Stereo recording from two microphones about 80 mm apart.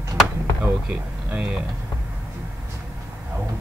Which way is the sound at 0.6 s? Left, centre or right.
Centre.